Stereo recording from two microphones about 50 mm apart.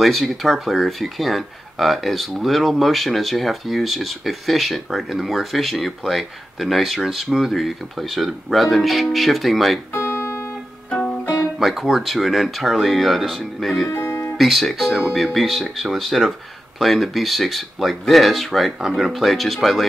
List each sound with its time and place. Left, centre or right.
0.0 s speech: centre
9.9 s music: left
11.6 s speech: centre
13.9 s music: left
14.4 s speech: centre